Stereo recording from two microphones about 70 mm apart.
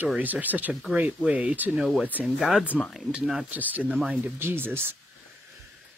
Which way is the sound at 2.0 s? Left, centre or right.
Right.